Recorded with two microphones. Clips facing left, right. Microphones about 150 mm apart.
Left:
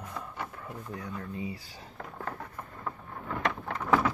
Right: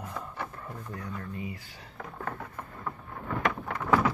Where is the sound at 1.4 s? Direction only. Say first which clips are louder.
Left 1 dB; 30° left (ahead or behind).